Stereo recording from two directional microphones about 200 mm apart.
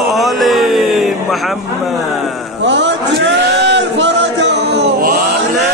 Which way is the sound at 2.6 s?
65° right (ahead or behind).